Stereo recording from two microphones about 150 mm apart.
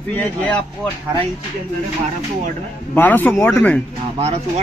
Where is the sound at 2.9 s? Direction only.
10° left (ahead or behind).